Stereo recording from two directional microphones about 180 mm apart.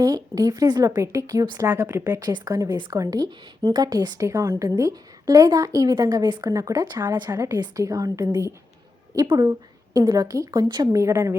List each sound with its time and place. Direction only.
0.0 s a woman's voice: 20° right (ahead or behind)